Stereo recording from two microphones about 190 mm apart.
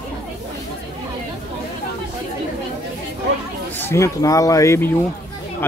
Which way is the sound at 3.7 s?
15° left (ahead or behind).